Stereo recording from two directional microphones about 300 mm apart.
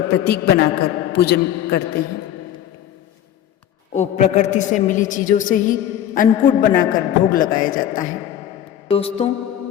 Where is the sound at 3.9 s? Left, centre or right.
Left.